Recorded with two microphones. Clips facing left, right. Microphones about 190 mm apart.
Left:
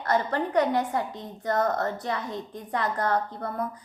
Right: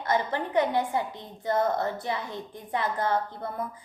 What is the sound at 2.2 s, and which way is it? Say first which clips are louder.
Speech: left 3 dB; 20° left (ahead or behind).